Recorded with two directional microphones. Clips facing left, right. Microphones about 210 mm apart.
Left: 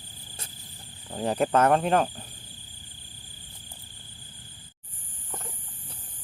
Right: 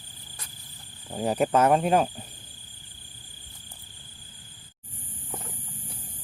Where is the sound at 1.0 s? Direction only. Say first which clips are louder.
Right 1 dB; 10° right (ahead or behind).